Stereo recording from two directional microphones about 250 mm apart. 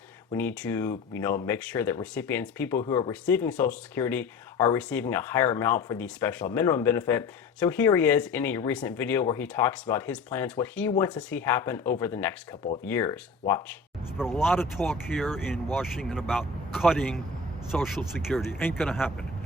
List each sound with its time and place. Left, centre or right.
0.3 s speech: centre
2.8 s speech: left
3.1 s speech: centre
14.2 s speech: centre